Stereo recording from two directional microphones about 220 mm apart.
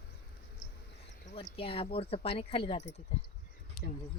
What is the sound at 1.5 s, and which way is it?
A woman's voice, 25° left (ahead or behind).